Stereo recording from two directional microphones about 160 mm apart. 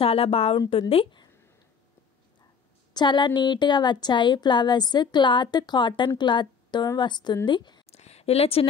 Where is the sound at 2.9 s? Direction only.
30° left (ahead or behind).